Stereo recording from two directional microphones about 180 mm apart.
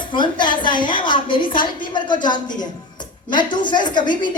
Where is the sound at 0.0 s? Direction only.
25° left (ahead or behind).